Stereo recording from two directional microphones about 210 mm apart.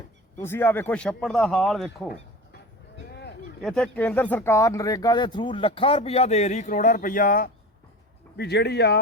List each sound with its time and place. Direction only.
0.3 s speech: 10° left (ahead or behind)
3.6 s speech: centre (ahead or behind); by 7.5 s 40° left (ahead or behind)
8.4 s speech: 50° left (ahead or behind)